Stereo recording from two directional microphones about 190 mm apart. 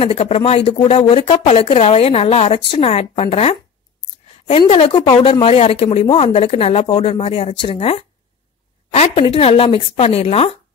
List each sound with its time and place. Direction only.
0.0 s a woman's voice: 30° left (ahead or behind)